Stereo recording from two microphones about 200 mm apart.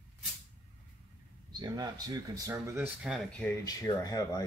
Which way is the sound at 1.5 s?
20° right (ahead or behind).